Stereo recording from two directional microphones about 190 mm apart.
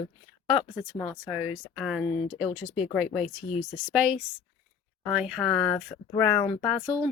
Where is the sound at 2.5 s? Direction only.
35° left (ahead or behind).